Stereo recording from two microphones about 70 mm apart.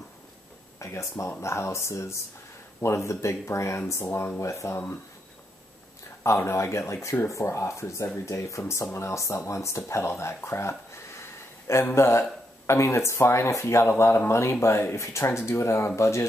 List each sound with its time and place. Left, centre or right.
0.7 s speech: left
6.2 s speech: left